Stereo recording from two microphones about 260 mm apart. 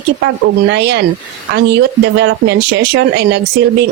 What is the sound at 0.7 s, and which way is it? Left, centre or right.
Speech, right.